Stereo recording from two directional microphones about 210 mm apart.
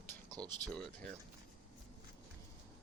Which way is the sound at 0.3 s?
20° right (ahead or behind).